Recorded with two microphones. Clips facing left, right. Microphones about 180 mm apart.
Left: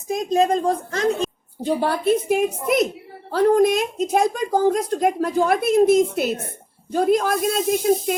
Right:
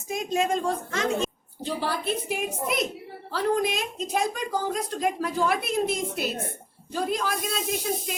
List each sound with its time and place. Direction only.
0.3 s speech: 35° left (ahead or behind)
1.6 s a woman's voice: 55° left (ahead or behind)